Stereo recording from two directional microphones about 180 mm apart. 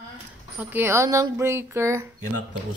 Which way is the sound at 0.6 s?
10° right (ahead or behind).